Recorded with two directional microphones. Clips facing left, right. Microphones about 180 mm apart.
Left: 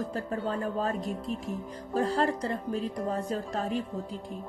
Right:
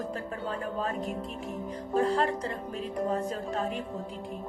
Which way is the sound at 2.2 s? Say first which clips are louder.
Left 1 dB; 35° left (ahead or behind).